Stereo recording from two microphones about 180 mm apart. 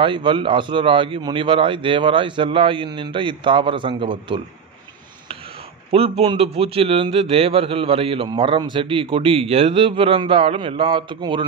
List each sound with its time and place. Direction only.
0.0 s a man's voice: 25° right (ahead or behind)
5.9 s a man's voice: 35° right (ahead or behind)